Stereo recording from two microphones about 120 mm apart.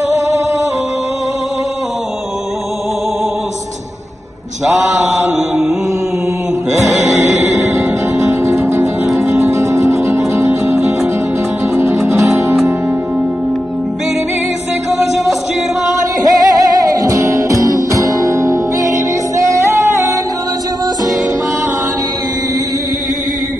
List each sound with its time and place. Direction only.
6.9 s music: centre (ahead or behind)
7.6 s music: 25° right (ahead or behind)
16.2 s music: 30° right (ahead or behind)